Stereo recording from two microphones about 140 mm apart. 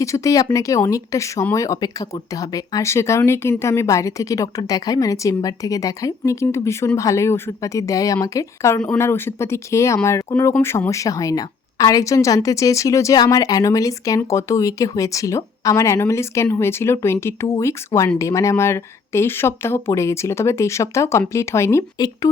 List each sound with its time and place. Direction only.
0.0 s speech: 25° left (ahead or behind)